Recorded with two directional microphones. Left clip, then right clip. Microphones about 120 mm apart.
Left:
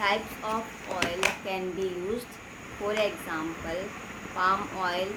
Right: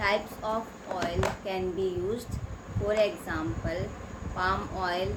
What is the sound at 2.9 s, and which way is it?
Speech, 5° left (ahead or behind).